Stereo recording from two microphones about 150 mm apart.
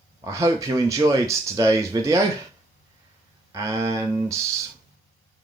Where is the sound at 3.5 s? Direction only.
20° right (ahead or behind).